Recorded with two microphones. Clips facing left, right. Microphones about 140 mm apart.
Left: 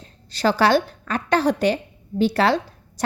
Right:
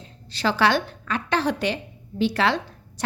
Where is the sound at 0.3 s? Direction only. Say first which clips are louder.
Left 3 dB; 45° left (ahead or behind).